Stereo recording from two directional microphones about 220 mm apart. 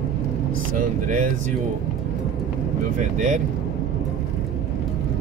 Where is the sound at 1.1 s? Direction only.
35° right (ahead or behind).